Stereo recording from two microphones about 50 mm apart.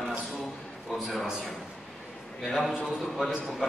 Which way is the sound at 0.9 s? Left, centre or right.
Centre.